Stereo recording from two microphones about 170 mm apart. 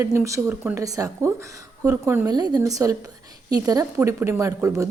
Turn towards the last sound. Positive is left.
turn(degrees=-20)  # may be behind; listen again after turning